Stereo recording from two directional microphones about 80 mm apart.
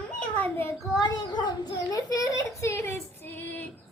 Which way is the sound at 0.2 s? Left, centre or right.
Centre.